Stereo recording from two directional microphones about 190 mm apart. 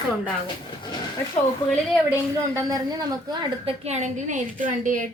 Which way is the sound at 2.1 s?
15° right (ahead or behind).